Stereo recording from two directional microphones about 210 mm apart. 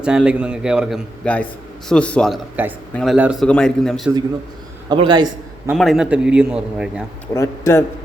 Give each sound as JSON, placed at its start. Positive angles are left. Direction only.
{"t": 0.0, "sound": "a man's voice", "side_deg": -5}
{"t": 4.9, "sound": "a man's voice", "side_deg": -20}
{"t": 5.7, "sound": "a man's voice", "side_deg": 0}
{"t": 7.3, "sound": "a man's voice", "side_deg": 15}